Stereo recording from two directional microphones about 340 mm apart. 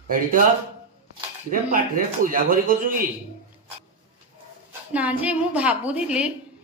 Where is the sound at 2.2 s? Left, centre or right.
Right.